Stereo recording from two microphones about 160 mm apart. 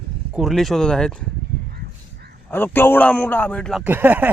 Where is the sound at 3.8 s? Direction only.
10° right (ahead or behind).